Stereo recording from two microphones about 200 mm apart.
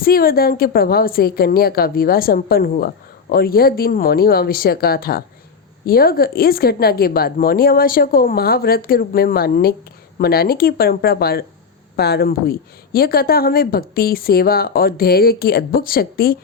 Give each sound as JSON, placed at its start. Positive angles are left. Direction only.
{"t": 0.0, "sound": "a woman's voice", "side_deg": 50}